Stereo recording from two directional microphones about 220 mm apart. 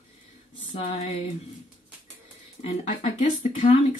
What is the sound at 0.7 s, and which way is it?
Speech, 30° left (ahead or behind).